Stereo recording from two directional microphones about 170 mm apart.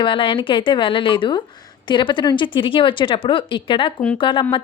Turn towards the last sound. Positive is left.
turn(degrees=30)  # may be behind; listen again after turning